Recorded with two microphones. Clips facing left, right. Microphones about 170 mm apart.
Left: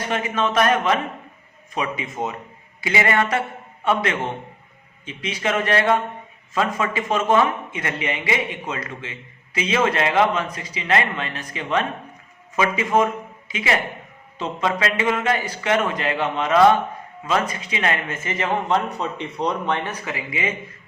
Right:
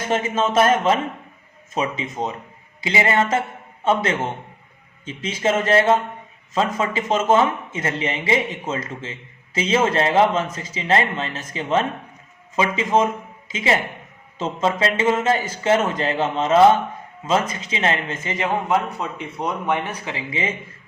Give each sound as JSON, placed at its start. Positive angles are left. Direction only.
{"t": 0.1, "sound": "speech", "side_deg": -25}
{"t": 5.0, "sound": "a man's voice", "side_deg": -30}
{"t": 20.1, "sound": "speech", "side_deg": -30}